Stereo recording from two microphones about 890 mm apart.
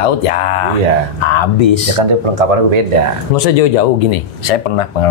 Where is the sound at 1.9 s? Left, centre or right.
Right.